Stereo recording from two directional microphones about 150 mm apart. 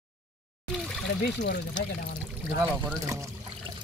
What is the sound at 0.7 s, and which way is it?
Water, centre (ahead or behind).